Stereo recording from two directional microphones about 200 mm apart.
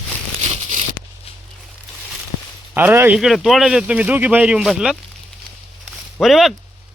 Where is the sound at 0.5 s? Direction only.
35° right (ahead or behind).